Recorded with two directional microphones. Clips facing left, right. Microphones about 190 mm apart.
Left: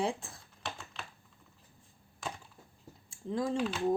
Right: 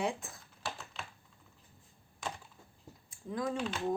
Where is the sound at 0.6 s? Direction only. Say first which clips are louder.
Even; 5° right (ahead or behind).